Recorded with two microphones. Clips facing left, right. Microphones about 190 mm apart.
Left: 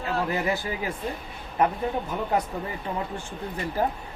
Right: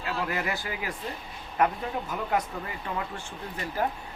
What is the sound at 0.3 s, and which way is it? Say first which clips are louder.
Speech: left 5 dB; 25° left (ahead or behind).